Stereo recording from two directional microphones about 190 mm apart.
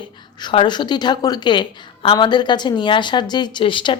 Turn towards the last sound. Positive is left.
turn(degrees=25)  # may be behind; listen again after turning